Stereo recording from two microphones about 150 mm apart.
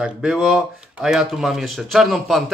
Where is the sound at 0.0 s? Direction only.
5° right (ahead or behind).